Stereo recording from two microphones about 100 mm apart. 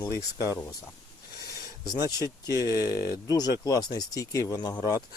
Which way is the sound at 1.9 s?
40° left (ahead or behind).